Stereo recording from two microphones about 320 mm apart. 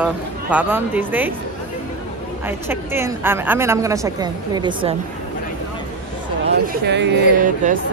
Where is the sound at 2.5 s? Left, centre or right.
Centre.